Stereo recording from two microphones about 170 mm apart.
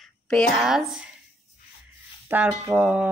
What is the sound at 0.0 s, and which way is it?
Speech, centre (ahead or behind).